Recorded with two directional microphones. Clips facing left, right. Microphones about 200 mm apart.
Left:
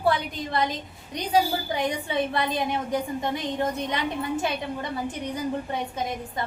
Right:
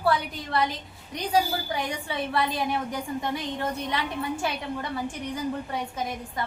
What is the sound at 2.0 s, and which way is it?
A woman's voice, 20° left (ahead or behind).